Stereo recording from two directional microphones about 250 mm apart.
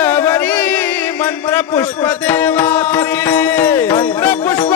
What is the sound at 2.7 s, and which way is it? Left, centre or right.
Music, centre.